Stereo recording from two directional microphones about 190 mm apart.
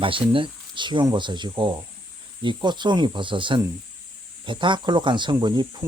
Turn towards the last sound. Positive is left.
turn(degrees=-20)  # may be behind; listen again after turning